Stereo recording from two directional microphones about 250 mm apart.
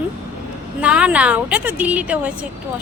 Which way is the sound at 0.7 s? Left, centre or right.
Centre.